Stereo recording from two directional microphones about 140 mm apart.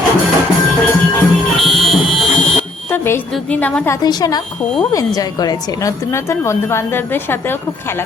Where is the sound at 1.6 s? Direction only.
Centre (ahead or behind).